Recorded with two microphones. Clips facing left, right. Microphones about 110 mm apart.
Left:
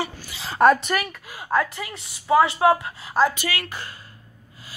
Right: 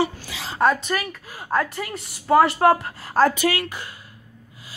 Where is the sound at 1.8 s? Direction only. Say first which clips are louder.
Right 4 dB; 45° right (ahead or behind).